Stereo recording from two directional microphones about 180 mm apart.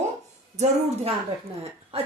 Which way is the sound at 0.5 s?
40° right (ahead or behind).